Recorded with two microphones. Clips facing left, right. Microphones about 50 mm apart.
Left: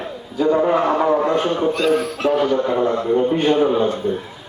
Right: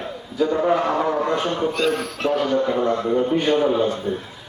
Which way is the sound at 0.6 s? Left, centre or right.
Centre.